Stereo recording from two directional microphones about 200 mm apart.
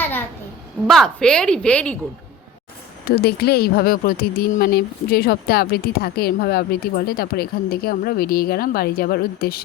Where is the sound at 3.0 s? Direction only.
50° left (ahead or behind).